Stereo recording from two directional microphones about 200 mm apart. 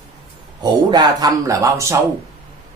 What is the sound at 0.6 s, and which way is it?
A man's voice, 20° right (ahead or behind).